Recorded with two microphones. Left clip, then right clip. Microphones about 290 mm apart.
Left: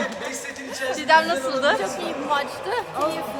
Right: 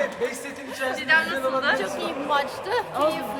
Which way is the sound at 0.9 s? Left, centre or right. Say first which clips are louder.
Left 4 dB; centre.